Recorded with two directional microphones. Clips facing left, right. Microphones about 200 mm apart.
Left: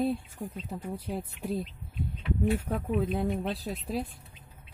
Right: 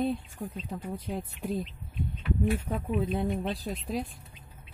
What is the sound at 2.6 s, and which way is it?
Speech, centre (ahead or behind).